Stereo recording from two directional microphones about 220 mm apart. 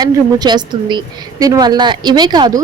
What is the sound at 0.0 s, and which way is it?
A woman's voice, 20° right (ahead or behind).